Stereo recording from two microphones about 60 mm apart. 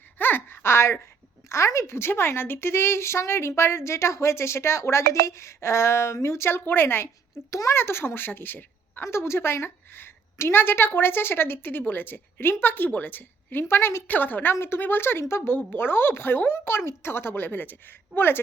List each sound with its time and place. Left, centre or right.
0.2 s a sound: left
1.5 s a woman's voice: left
7.5 s speech: left
7.8 s a woman's voice: left
9.0 s a woman's voice: left
14.1 s a woman's voice: left